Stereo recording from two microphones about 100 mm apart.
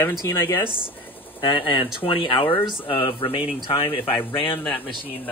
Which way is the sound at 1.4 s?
50° left (ahead or behind).